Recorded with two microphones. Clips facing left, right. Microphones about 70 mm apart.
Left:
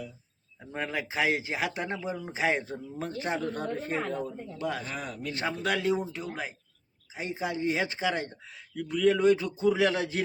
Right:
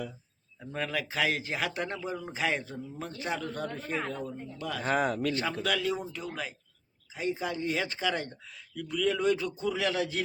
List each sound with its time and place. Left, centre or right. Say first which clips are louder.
0.6 s speech: even; left
2.4 s speech: left 3 dB; left
4.8 s speech: right 9 dB; right
5.6 s speech: left 6 dB; left